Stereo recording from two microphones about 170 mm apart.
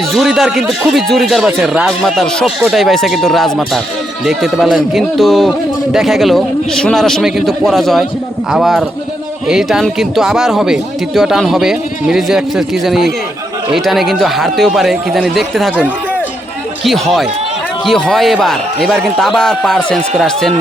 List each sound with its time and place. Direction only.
0.1 s a man's voice: centre (ahead or behind)